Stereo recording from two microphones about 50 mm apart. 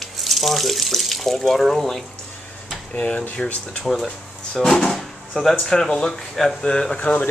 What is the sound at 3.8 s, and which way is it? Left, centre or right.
Speech, centre.